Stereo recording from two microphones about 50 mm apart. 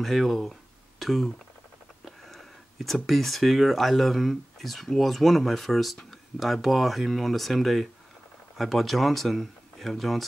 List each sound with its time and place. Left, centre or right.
0.0 s speech: centre